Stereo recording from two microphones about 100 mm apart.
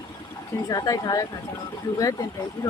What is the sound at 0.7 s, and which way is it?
Speech, 40° left (ahead or behind).